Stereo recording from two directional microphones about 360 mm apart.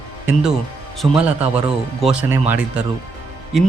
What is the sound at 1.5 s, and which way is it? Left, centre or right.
Speech, centre.